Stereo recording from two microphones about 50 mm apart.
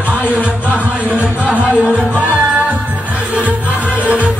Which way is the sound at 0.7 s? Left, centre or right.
Right.